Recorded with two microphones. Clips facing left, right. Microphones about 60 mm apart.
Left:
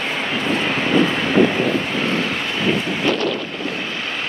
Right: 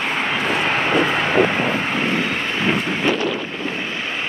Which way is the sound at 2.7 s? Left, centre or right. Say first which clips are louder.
Left 1 dB; centre.